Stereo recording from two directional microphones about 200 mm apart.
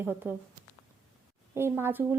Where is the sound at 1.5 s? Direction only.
10° right (ahead or behind).